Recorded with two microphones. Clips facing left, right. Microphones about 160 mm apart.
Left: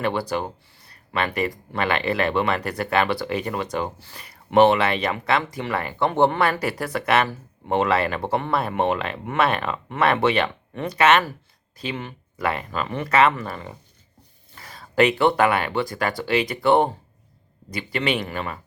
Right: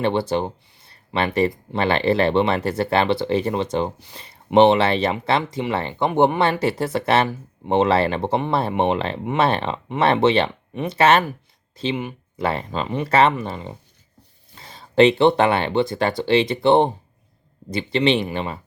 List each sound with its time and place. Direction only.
0.0 s speech: 25° right (ahead or behind)
12.4 s speech: 30° right (ahead or behind)
13.3 s speech: 20° right (ahead or behind)